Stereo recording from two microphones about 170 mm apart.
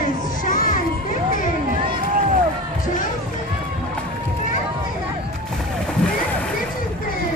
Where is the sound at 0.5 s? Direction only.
50° left (ahead or behind).